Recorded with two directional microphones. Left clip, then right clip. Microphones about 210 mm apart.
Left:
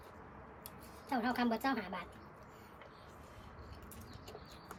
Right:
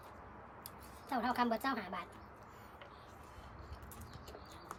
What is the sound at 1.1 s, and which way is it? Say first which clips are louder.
Speech: right 1 dB; 5° right (ahead or behind).